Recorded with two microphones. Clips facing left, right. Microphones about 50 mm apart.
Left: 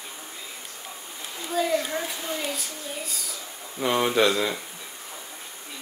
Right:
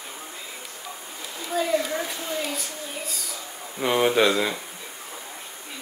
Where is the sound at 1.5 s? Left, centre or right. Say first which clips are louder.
Right 1 dB; centre.